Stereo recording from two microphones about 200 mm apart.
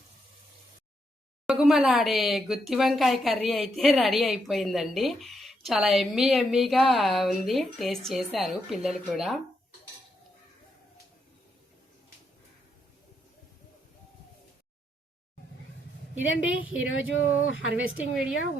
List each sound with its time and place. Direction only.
1.5 s speech: centre (ahead or behind)
16.1 s speech: 75° left (ahead or behind)